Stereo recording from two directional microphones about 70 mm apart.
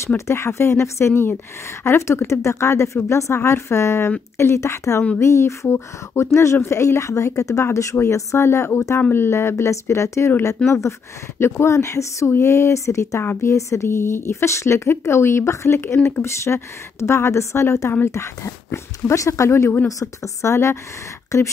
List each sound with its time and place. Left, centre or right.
0.3 s speech: left
13.2 s speech: left
13.5 s speech: left